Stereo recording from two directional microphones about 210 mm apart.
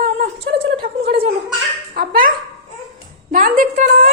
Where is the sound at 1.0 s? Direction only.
25° right (ahead or behind).